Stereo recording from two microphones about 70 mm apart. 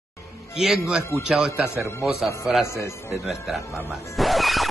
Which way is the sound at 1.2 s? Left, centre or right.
Centre.